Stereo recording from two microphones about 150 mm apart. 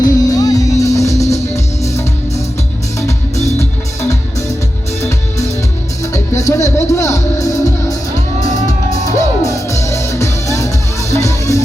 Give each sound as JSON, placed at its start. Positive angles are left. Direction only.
{"t": 0.0, "sound": "music", "side_deg": 25}
{"t": 6.1, "sound": "music", "side_deg": 20}
{"t": 9.0, "sound": "music", "side_deg": 20}